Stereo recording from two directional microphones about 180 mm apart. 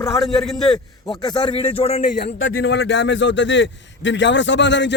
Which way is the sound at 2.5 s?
65° left (ahead or behind).